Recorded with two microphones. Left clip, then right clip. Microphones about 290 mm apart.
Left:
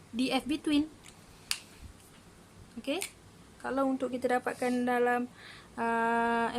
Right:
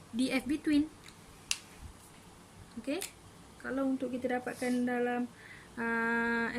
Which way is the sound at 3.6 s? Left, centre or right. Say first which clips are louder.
Left 3 dB; centre.